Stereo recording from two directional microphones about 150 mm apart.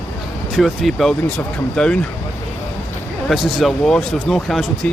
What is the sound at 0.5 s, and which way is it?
Speech, centre (ahead or behind).